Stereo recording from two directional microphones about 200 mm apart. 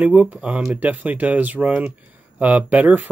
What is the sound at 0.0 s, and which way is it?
Speech, 5° right (ahead or behind).